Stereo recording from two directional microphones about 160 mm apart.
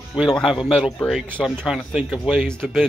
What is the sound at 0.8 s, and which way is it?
Speech, centre (ahead or behind).